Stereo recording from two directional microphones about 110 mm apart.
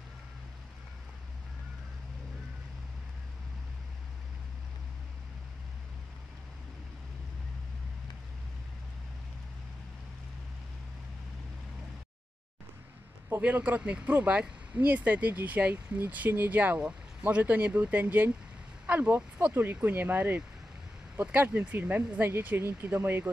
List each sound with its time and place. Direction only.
13.4 s speech: 15° right (ahead or behind)